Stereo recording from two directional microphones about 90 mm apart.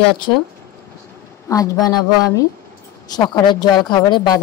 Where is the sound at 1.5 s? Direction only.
40° left (ahead or behind).